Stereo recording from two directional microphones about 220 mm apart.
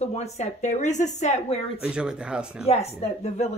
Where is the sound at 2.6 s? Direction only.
30° left (ahead or behind).